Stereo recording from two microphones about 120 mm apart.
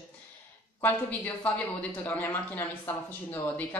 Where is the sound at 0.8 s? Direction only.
15° left (ahead or behind).